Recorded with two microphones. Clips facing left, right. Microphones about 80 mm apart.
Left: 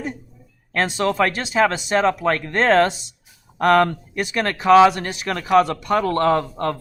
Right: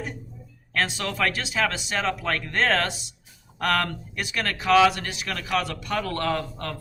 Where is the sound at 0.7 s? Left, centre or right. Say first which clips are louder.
Left 7 dB; left.